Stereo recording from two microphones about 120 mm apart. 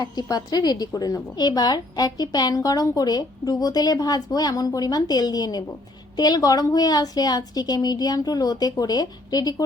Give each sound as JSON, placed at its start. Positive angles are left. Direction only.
{"t": 0.0, "sound": "a woman's voice", "side_deg": 35}